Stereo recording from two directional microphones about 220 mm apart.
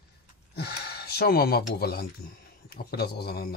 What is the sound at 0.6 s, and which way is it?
Speech, 45° left (ahead or behind).